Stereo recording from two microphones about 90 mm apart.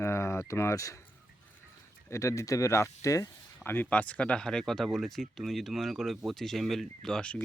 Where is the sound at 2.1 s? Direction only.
35° left (ahead or behind).